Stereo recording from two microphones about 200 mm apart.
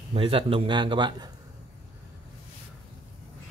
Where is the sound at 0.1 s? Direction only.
25° right (ahead or behind).